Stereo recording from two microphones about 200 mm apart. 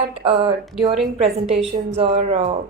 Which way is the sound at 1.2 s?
30° right (ahead or behind).